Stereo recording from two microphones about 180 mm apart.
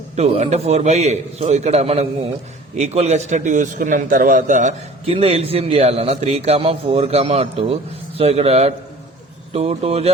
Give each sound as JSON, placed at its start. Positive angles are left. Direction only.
{"t": 0.2, "sound": "a man's voice", "side_deg": -35}